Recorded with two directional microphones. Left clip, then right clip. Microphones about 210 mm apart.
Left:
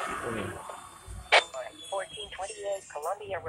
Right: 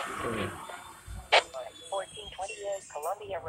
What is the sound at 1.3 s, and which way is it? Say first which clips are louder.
Speech: left 1 dB; 5° left (ahead or behind).